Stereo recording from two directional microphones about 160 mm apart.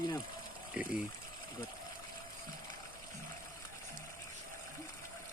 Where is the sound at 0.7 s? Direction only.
10° right (ahead or behind).